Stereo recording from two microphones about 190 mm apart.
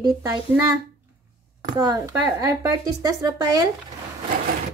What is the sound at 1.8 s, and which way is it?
A woman's voice, 20° right (ahead or behind).